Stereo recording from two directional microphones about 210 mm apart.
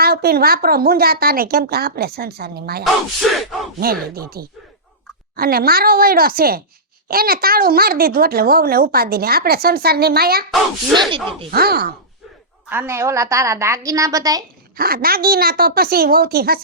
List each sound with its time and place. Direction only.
0.0 s speech: 50° right (ahead or behind)
2.8 s speech: centre (ahead or behind)
4.1 s speech: 45° right (ahead or behind)
11.1 s speech: 25° right (ahead or behind)
11.5 s speech: 45° right (ahead or behind)
12.6 s a woman's voice: 10° right (ahead or behind)
14.8 s speech: 45° right (ahead or behind)